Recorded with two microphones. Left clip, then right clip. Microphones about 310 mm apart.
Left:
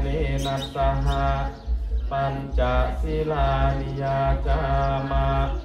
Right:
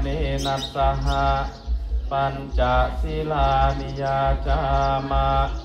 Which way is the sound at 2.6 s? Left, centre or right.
Centre.